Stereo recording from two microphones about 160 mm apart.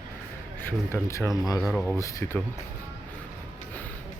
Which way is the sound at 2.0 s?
20° left (ahead or behind).